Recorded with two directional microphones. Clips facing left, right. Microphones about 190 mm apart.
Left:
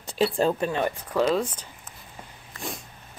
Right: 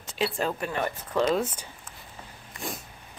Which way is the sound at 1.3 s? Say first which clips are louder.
Left 1 dB; 5° right (ahead or behind).